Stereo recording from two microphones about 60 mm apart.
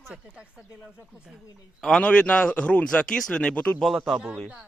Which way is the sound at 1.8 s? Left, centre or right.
Centre.